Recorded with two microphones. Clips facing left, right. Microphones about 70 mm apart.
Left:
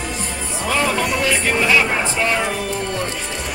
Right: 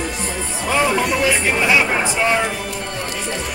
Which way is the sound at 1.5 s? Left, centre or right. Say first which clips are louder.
Left 2 dB; centre.